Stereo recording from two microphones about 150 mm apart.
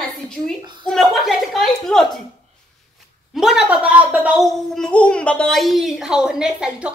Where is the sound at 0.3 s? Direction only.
Centre (ahead or behind).